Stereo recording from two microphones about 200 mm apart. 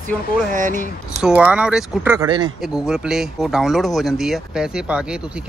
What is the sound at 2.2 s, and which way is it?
Speech, 20° right (ahead or behind).